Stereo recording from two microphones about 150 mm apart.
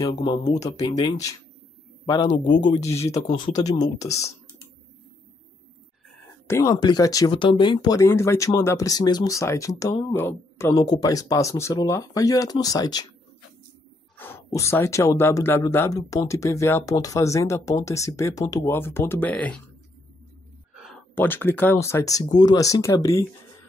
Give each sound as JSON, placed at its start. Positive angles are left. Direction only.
{"t": 0.1, "sound": "speech", "side_deg": 30}
{"t": 2.3, "sound": "speech", "side_deg": 60}
{"t": 2.9, "sound": "speech", "side_deg": 20}
{"t": 3.3, "sound": "speech", "side_deg": 35}
{"t": 6.4, "sound": "speech", "side_deg": 20}
{"t": 14.1, "sound": "speech", "side_deg": 15}
{"t": 20.7, "sound": "a sound", "side_deg": 0}
{"t": 21.1, "sound": "speech", "side_deg": 15}